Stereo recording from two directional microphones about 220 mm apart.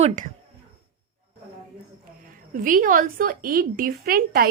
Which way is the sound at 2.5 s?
40° right (ahead or behind).